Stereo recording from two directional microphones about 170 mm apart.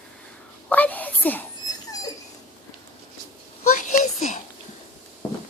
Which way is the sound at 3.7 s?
50° left (ahead or behind).